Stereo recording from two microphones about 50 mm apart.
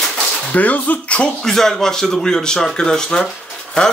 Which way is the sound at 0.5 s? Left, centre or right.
Left.